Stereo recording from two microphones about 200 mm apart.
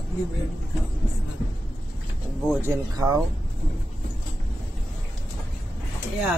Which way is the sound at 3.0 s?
15° right (ahead or behind).